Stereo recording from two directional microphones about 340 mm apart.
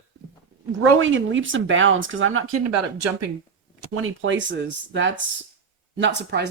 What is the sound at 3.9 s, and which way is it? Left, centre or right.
Speech, right.